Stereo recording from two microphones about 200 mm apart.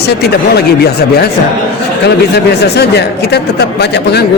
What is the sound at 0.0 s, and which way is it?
Speech, 55° left (ahead or behind).